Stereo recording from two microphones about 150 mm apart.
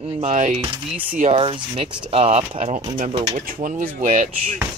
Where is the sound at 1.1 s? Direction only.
60° right (ahead or behind).